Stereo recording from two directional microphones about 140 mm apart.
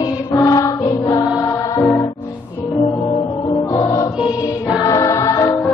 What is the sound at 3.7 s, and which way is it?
Music, 25° left (ahead or behind).